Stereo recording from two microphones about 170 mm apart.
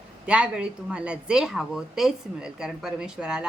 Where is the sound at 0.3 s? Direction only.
5° right (ahead or behind).